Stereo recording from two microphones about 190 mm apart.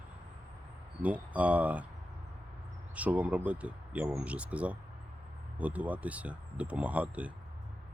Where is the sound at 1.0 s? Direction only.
10° right (ahead or behind).